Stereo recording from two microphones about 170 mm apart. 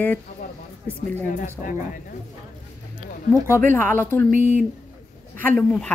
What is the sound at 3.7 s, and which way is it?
Speech, 10° left (ahead or behind).